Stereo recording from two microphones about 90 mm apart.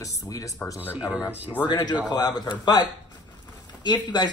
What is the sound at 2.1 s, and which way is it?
Speech, 50° left (ahead or behind).